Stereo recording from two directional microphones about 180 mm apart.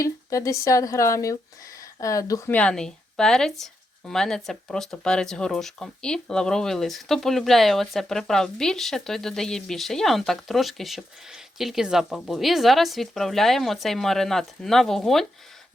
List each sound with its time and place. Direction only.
0.0 s speech: 15° left (ahead or behind)
2.6 s speech: 5° left (ahead or behind)